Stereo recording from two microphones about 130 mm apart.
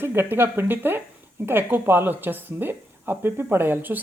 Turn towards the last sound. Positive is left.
turn(degrees=-15)  # may be behind; listen again after turning